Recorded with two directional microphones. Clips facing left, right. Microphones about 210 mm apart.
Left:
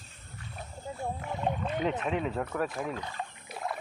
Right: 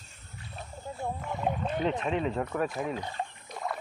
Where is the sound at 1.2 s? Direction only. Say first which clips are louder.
Right 1 dB; 5° left (ahead or behind).